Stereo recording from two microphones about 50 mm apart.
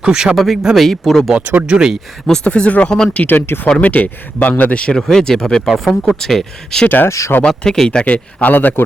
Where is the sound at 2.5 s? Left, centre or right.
Left.